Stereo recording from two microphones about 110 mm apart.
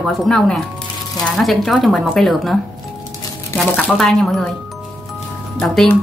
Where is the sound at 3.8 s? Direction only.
5° left (ahead or behind).